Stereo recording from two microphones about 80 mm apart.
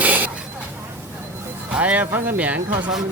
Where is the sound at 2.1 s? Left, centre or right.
Right.